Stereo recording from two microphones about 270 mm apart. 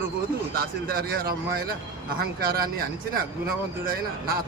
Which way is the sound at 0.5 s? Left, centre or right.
Right.